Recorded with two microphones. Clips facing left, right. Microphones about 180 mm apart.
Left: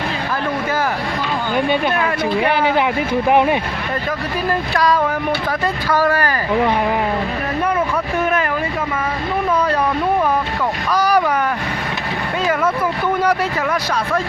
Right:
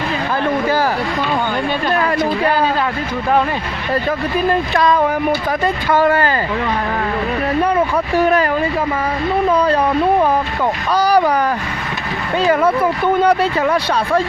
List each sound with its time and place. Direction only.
4.4 s speech: 25° right (ahead or behind)
7.6 s speech: 35° right (ahead or behind)
9.5 s speech: 30° right (ahead or behind)
12.5 s speech: 30° right (ahead or behind)